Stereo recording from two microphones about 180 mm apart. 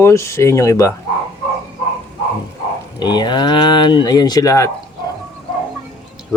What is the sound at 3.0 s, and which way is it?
Speech, 25° left (ahead or behind).